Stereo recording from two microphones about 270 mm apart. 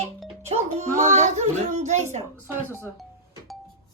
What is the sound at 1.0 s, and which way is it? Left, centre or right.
Speech, right.